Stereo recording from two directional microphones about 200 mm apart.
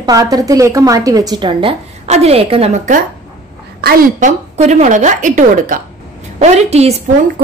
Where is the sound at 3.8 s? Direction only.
50° right (ahead or behind); by 6.9 s 30° right (ahead or behind).